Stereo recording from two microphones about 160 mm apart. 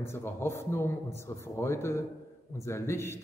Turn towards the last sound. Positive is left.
turn(degrees=15)  # may be behind; listen again after turning